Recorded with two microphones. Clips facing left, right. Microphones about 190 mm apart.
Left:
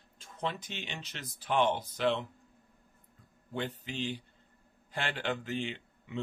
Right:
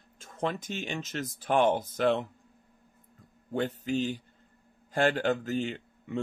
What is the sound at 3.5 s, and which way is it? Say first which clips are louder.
A man's voice: right 8 dB; 45° right (ahead or behind).